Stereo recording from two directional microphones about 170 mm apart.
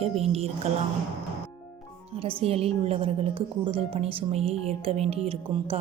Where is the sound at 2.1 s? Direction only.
35° right (ahead or behind).